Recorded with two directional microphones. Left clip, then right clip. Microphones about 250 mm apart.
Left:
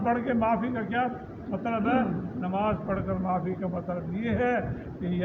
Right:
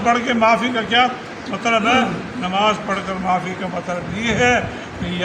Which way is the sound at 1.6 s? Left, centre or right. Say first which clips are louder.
Right 11 dB; centre.